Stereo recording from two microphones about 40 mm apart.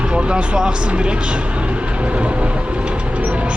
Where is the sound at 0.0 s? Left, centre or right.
Right.